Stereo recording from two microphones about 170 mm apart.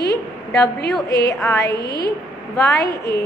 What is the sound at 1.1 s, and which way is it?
Speech, 20° left (ahead or behind).